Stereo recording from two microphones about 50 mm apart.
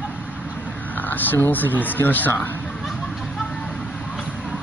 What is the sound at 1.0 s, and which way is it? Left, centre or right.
Speech, left.